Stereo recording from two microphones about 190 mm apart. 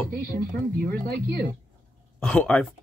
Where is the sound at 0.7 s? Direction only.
50° right (ahead or behind).